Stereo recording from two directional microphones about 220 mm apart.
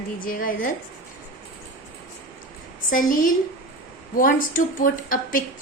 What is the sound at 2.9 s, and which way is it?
A woman's voice, 40° left (ahead or behind).